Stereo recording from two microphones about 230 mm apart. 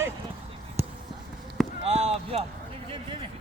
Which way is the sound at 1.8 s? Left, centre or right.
Right.